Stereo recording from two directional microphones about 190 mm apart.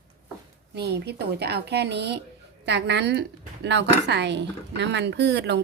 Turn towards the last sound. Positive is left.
turn(degrees=-65)  # may be behind; listen again after turning